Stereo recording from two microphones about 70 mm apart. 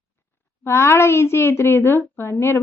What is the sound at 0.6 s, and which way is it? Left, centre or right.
A child's voice, left.